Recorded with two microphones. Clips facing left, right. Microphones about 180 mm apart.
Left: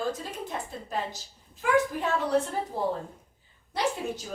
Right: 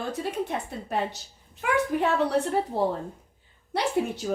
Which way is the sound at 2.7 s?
65° right (ahead or behind).